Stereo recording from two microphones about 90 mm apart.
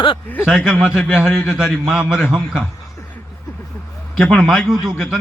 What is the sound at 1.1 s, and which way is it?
A man's voice, 5° right (ahead or behind).